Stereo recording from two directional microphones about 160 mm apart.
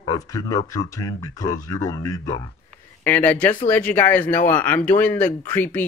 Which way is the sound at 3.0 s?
10° left (ahead or behind).